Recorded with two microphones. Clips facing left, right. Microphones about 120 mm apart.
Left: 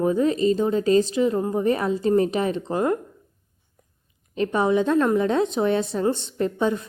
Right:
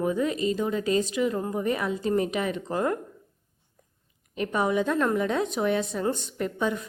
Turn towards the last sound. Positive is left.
turn(degrees=30)  # may be behind; listen again after turning